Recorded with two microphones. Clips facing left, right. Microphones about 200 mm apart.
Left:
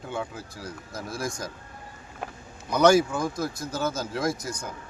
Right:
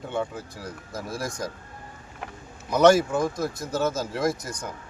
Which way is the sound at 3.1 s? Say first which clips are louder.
Right 3 dB; 20° right (ahead or behind).